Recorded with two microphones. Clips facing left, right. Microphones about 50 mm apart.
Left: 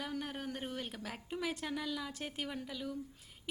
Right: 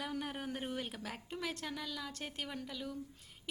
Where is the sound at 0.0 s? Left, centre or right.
Centre.